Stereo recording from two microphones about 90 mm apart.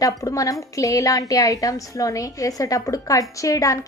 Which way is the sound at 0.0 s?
40° left (ahead or behind).